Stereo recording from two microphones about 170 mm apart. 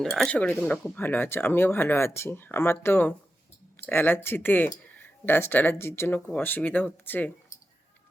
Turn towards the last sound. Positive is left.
turn(degrees=10)  # may be behind; listen again after turning